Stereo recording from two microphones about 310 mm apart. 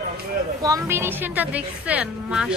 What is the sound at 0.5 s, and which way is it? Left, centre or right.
A woman's voice, centre.